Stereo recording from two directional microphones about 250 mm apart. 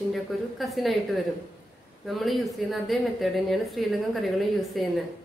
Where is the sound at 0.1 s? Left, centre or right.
Centre.